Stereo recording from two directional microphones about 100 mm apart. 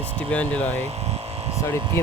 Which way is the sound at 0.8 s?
90° right.